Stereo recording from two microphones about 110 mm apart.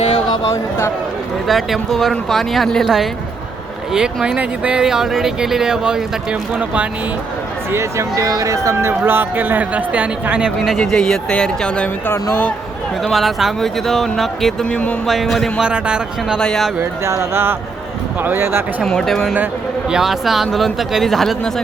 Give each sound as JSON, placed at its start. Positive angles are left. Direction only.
{"t": 1.5, "sound": "speech", "side_deg": 0}
{"t": 7.7, "sound": "speech", "side_deg": -25}
{"t": 10.8, "sound": "speech", "side_deg": 5}
{"t": 13.0, "sound": "speech", "side_deg": 0}
{"t": 15.0, "sound": "speech", "side_deg": 0}
{"t": 16.4, "sound": "speech", "side_deg": 5}
{"t": 16.8, "sound": "speech", "side_deg": -25}
{"t": 18.8, "sound": "speech", "side_deg": 5}